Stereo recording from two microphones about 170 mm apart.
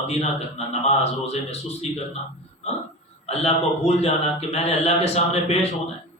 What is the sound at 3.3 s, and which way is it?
A man's voice, 35° left (ahead or behind).